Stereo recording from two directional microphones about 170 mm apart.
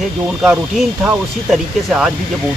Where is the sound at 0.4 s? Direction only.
5° right (ahead or behind).